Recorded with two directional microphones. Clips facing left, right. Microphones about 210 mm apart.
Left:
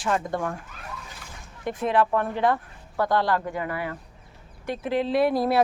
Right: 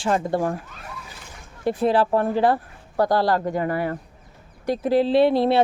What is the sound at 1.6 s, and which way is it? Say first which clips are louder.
Speech: right 4 dB; 35° right (ahead or behind).